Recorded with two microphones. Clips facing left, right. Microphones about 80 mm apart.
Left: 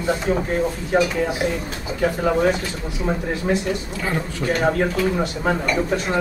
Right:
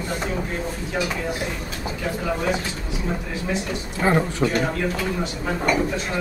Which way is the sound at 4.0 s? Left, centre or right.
Right.